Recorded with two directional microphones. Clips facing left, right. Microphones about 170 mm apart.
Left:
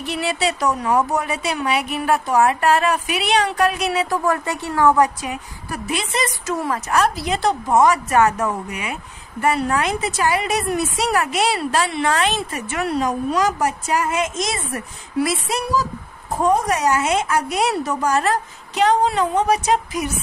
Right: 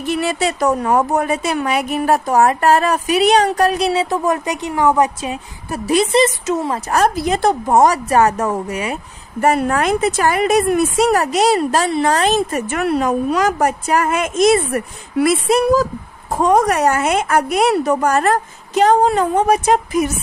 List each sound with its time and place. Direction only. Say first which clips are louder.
0.0 s a woman's voice: right 4 dB; 45° right (ahead or behind); by 5.8 s 25° right (ahead or behind)
5.9 s a woman's voice: right 11 dB; 40° right (ahead or behind)
6.2 s speech: right 5 dB; 20° right (ahead or behind)
6.9 s a woman's voice: right 4 dB; 40° right (ahead or behind)
16.4 s a woman's voice: right 4 dB; 70° right (ahead or behind); by 20.1 s 50° right (ahead or behind)